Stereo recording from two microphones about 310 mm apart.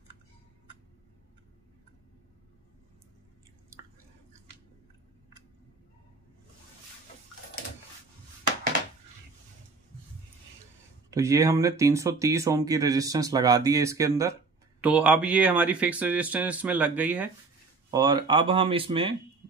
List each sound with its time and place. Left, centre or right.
11.1 s speech: centre